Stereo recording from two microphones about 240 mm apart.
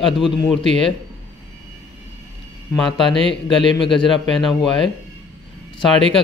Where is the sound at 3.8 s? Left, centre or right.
Left.